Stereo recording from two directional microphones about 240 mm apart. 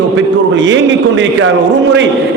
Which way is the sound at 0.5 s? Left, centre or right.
Right.